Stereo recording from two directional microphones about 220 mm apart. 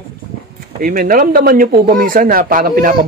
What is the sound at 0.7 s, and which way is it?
Speech, 40° right (ahead or behind).